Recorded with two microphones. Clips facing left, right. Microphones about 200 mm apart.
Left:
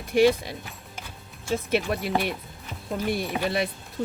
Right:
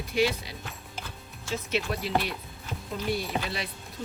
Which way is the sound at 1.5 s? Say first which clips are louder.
Left 5 dB; 55° left (ahead or behind).